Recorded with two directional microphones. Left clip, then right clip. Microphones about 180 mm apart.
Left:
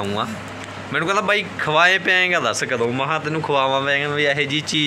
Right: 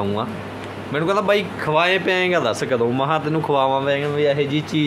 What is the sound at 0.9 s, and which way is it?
Speech, 10° right (ahead or behind).